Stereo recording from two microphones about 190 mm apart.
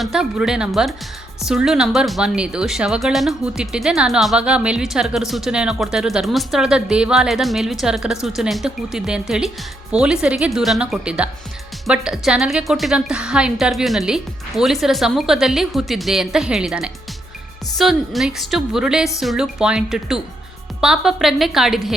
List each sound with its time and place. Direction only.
0.0 s speech: 5° right (ahead or behind)